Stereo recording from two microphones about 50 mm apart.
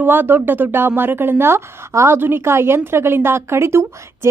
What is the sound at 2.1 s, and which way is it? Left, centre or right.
A woman's voice, right.